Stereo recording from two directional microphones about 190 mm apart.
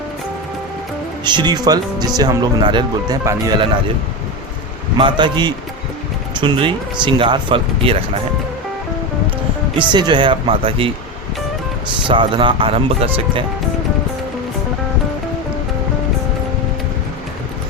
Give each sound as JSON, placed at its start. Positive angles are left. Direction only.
{"t": 1.2, "sound": "speech", "side_deg": -25}
{"t": 4.9, "sound": "speech", "side_deg": -25}
{"t": 9.9, "sound": "speech", "side_deg": -25}
{"t": 12.0, "sound": "speech", "side_deg": -25}